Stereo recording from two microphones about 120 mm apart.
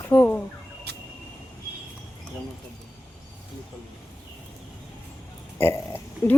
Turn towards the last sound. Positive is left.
turn(degrees=20)  # may be behind; listen again after turning